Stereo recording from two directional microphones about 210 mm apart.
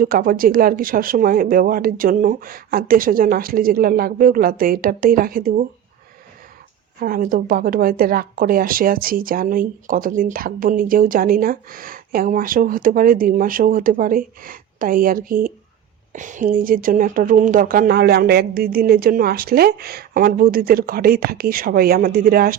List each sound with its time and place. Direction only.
0.0 s speech: 45° right (ahead or behind)
7.0 s speech: 40° right (ahead or behind)